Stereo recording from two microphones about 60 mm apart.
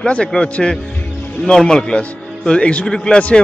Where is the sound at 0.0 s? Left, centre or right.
Centre.